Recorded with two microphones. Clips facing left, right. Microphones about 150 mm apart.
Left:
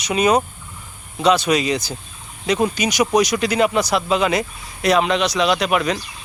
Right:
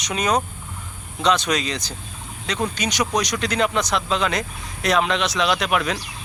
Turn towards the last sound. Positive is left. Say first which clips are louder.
# left 3 dB
turn(degrees=0)  # may be behind; listen again after turning